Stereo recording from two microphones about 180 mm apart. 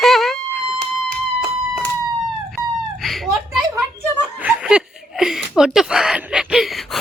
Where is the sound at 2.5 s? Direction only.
Centre (ahead or behind).